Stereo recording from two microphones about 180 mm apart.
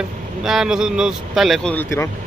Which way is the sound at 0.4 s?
Centre (ahead or behind).